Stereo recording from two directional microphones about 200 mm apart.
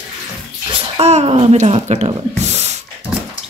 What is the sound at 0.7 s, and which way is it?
Speech, 30° right (ahead or behind).